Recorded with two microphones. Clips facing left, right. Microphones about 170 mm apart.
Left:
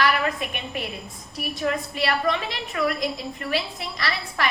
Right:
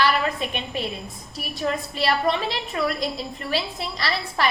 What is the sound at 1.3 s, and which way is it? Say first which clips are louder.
A woman's voice: left 1 dB; 30° right (ahead or behind).